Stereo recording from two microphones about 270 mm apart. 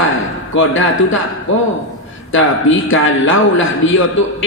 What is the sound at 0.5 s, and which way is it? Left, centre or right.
A man's voice, left.